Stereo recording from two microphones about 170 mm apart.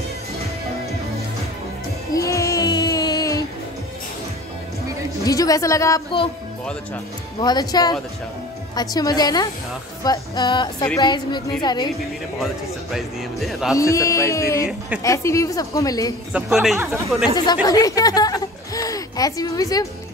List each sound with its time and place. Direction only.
2.1 s music: 20° left (ahead or behind)
5.2 s a woman's voice: 20° left (ahead or behind)
7.4 s a woman's voice: 25° left (ahead or behind)
12.9 s speech: centre (ahead or behind)
13.7 s a woman's voice: 20° left (ahead or behind)
16.3 s speech: 5° right (ahead or behind)
17.6 s speech: 20° left (ahead or behind)